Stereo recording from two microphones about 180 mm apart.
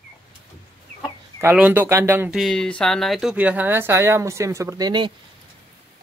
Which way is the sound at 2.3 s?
5° left (ahead or behind).